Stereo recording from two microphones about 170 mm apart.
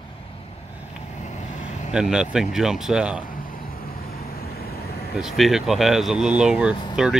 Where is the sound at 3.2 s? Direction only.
55° left (ahead or behind).